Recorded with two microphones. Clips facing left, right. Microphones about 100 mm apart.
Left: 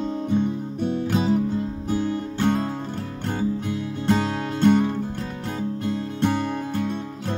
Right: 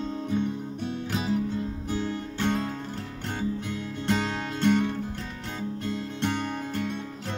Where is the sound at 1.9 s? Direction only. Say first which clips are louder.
Left 8 dB; 45° left (ahead or behind).